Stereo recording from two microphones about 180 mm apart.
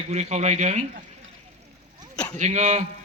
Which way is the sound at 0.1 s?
40° right (ahead or behind).